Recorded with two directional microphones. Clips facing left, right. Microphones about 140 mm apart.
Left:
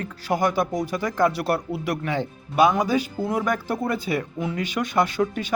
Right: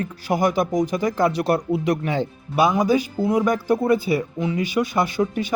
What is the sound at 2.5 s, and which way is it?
Speech, 5° right (ahead or behind).